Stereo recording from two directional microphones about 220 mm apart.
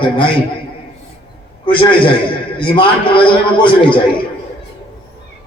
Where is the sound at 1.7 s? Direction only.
25° left (ahead or behind).